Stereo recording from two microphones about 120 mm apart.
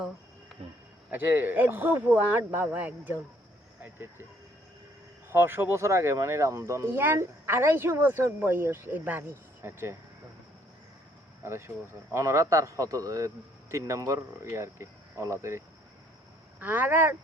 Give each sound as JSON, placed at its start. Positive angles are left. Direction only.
{"t": 0.6, "sound": "speech", "side_deg": -55}
{"t": 1.1, "sound": "speech", "side_deg": -15}
{"t": 5.3, "sound": "speech", "side_deg": -20}
{"t": 11.4, "sound": "speech", "side_deg": -20}